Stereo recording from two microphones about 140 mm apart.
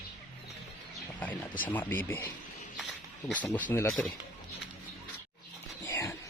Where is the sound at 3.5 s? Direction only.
15° left (ahead or behind).